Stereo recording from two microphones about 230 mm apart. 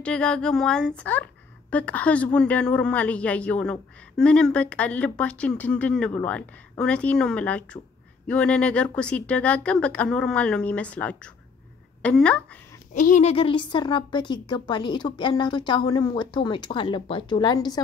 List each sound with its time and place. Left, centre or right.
0.0 s a woman's voice: centre
12.9 s a woman's voice: left; by 17.8 s centre